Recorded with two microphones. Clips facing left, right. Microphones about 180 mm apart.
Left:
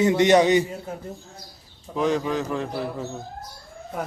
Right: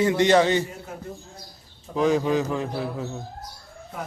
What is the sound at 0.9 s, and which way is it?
Speech, 30° left (ahead or behind).